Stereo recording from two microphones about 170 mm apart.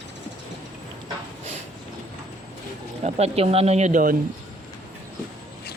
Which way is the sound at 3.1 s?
35° right (ahead or behind).